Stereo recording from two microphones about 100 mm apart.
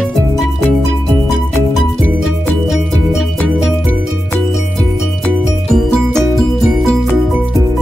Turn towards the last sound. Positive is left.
turn(degrees=5)  # may be behind; listen again after turning